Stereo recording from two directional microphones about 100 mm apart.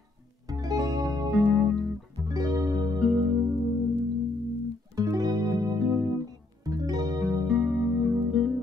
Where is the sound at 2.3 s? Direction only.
40° right (ahead or behind).